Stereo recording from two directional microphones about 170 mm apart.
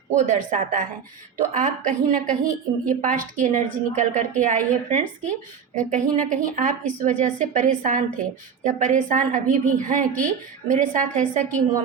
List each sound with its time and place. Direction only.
0.1 s a woman's voice: 45° right (ahead or behind)